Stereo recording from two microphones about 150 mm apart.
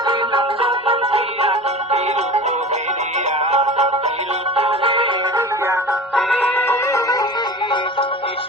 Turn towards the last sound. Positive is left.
turn(degrees=25)  # may be behind; listen again after turning